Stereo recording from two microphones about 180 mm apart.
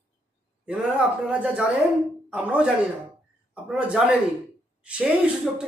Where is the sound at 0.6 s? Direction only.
5° right (ahead or behind).